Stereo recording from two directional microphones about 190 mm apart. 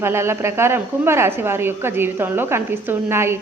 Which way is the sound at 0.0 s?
15° right (ahead or behind).